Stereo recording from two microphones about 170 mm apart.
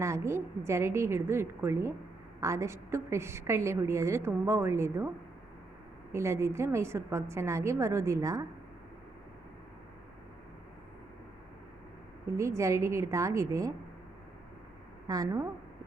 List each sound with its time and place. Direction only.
0.0 s a woman's voice: 15° right (ahead or behind)
12.4 s a woman's voice: 15° right (ahead or behind)
15.0 s a woman's voice: 20° right (ahead or behind)